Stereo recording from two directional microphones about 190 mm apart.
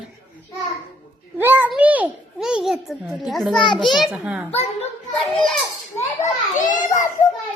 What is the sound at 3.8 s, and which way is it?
Speech, centre (ahead or behind).